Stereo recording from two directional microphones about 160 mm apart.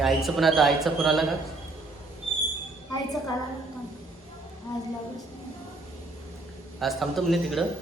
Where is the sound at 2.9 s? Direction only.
25° left (ahead or behind).